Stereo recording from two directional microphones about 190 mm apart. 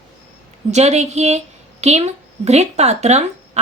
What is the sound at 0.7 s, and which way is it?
A woman's voice, 35° right (ahead or behind).